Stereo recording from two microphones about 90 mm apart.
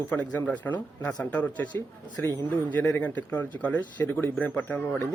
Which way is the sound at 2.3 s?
55° right (ahead or behind).